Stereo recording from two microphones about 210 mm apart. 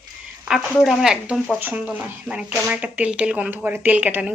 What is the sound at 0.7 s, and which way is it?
Speech, centre (ahead or behind).